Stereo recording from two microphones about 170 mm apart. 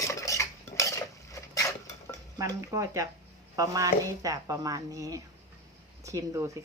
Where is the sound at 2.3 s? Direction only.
20° right (ahead or behind).